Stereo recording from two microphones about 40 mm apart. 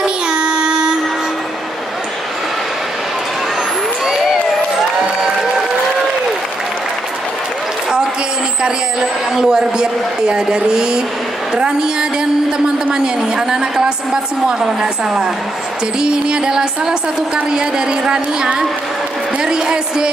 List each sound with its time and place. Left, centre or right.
0.0 s child singing: right
4.0 s crowd: centre
9.3 s a woman's voice: centre
14.6 s music: centre
17.5 s a woman's voice: centre